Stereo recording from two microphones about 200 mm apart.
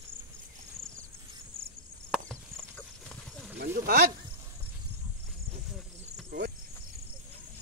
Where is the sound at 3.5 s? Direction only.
55° right (ahead or behind).